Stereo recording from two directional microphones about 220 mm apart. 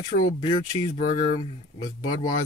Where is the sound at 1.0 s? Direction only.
40° left (ahead or behind).